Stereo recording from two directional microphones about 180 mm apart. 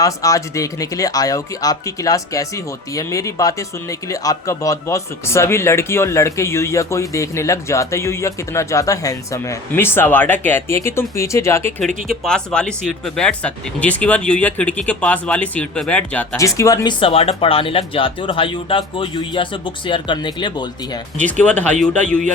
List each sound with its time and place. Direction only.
0.0 s speech: 20° left (ahead or behind)
12.0 s speech: centre (ahead or behind)
16.6 s speech: 20° left (ahead or behind)
21.4 s speech: 10° left (ahead or behind)